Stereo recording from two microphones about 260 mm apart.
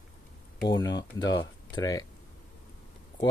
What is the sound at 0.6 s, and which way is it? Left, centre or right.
Speech, centre.